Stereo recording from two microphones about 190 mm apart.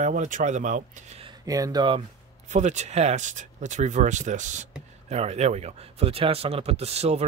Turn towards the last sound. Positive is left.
turn(degrees=-35)  # may be behind; listen again after turning